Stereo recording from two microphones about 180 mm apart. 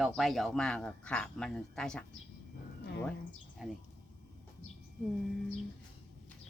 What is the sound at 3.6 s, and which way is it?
Speech, 5° right (ahead or behind).